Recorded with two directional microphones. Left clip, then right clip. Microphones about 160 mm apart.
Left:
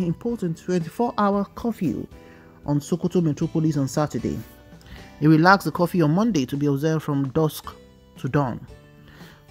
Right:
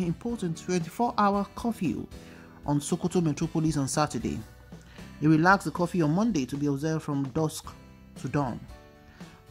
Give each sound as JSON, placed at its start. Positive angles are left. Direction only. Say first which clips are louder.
{"t": 0.0, "sound": "speech", "louder": "left 6 dB", "side_deg": 30}
{"t": 5.2, "sound": "speech", "louder": "left 6 dB", "side_deg": 30}